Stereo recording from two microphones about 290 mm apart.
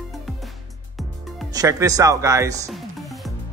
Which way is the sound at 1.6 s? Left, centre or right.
Centre.